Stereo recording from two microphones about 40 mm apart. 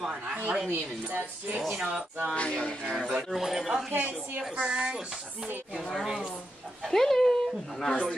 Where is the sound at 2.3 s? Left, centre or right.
Left.